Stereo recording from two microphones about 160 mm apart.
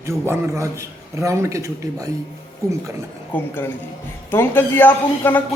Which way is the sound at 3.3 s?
15° left (ahead or behind).